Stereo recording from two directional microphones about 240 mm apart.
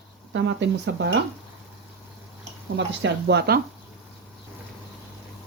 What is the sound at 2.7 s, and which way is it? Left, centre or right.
Speech, right.